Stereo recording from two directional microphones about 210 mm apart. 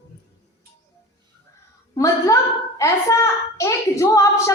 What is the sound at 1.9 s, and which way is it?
A woman's voice, 15° left (ahead or behind).